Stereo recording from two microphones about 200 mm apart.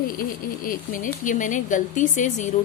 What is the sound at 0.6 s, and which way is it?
A woman's voice, 45° left (ahead or behind).